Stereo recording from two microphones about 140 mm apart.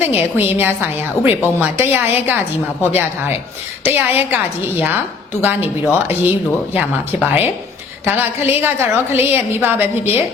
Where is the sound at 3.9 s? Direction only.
15° right (ahead or behind).